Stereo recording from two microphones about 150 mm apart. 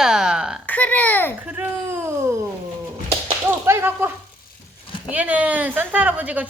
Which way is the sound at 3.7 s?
15° right (ahead or behind).